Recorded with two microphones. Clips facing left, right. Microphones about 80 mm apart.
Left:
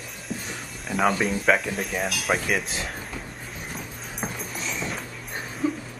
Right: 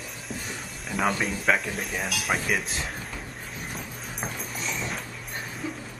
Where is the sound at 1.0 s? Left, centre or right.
Centre.